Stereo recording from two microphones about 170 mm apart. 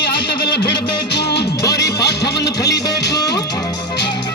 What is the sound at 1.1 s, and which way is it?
Music, 75° left (ahead or behind).